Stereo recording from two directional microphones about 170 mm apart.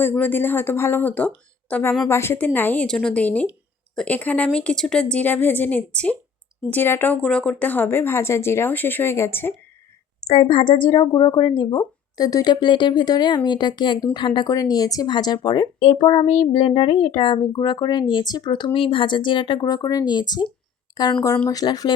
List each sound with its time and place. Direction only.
0.0 s speech: 10° left (ahead or behind)
10.2 s a woman's voice: 35° left (ahead or behind)